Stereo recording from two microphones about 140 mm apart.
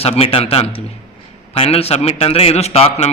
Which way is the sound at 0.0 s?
40° left (ahead or behind).